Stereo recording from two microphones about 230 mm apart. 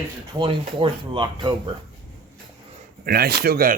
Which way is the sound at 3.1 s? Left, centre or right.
Right.